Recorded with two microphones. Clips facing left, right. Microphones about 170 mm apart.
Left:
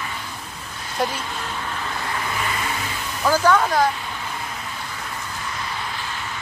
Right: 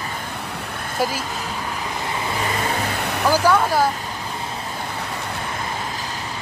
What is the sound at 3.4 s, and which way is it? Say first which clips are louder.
Speech: even; 10° right (ahead or behind).